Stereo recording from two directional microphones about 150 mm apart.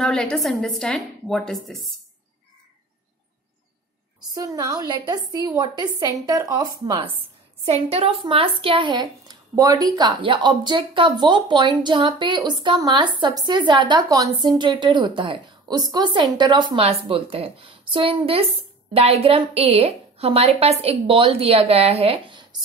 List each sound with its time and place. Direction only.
0.0 s a woman's voice: 5° left (ahead or behind)
4.3 s a woman's voice: 25° right (ahead or behind)
7.6 s speech: 45° right (ahead or behind)